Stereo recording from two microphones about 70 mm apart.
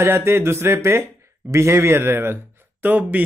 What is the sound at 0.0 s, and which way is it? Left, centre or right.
A man's voice, right.